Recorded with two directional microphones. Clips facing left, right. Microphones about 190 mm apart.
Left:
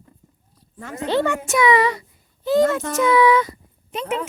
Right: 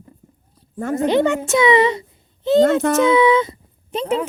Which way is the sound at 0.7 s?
50° right (ahead or behind).